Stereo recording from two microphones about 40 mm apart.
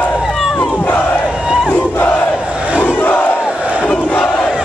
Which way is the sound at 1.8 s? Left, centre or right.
Left.